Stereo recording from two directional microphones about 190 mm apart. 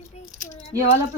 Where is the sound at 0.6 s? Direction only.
35° left (ahead or behind).